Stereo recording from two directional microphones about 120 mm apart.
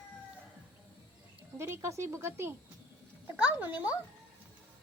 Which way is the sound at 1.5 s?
20° right (ahead or behind).